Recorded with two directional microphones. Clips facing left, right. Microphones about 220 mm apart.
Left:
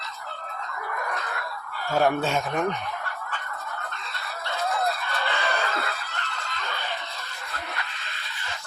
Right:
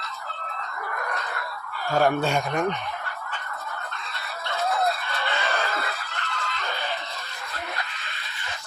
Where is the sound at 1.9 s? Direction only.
Centre (ahead or behind).